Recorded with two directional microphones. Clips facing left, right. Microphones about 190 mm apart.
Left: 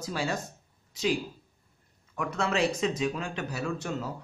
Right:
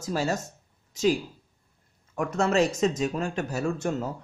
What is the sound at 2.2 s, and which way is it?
Speech, 45° right (ahead or behind).